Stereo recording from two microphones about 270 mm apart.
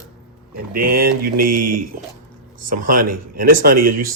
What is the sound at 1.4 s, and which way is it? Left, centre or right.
Speech, right.